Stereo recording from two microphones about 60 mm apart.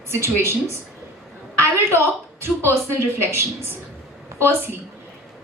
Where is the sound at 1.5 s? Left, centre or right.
Right.